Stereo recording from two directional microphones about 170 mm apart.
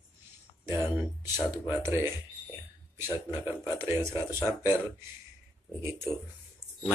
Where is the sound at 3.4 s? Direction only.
15° right (ahead or behind).